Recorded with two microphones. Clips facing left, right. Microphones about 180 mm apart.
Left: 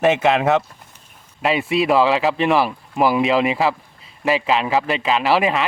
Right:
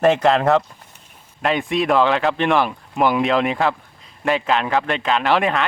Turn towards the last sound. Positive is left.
turn(degrees=0)  # may be behind; listen again after turning